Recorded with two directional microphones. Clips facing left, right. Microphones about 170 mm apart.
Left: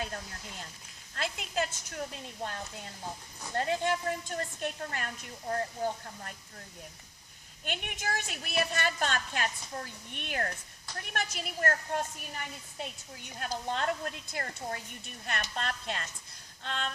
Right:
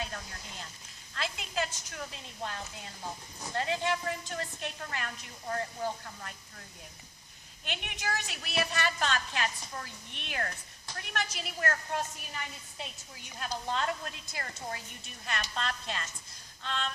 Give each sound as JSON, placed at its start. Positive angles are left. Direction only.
{"t": 1.1, "sound": "a woman's voice", "side_deg": 45}
{"t": 7.6, "sound": "a woman's voice", "side_deg": 50}